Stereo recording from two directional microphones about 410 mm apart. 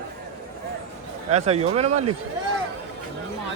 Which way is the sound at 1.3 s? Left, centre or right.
Centre.